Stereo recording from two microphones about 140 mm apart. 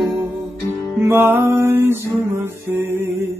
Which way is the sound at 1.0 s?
15° right (ahead or behind).